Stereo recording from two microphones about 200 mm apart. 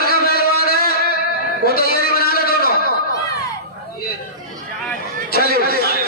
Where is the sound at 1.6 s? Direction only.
50° left (ahead or behind).